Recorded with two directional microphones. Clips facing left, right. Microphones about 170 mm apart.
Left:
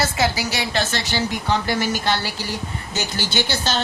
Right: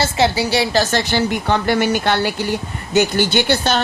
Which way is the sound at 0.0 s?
30° right (ahead or behind).